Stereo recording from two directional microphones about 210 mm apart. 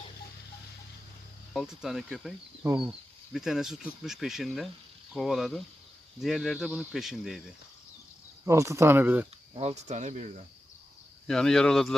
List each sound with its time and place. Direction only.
1.5 s speech: centre (ahead or behind)
8.4 s speech: 15° right (ahead or behind)
9.6 s speech: 30° right (ahead or behind)
11.3 s speech: centre (ahead or behind)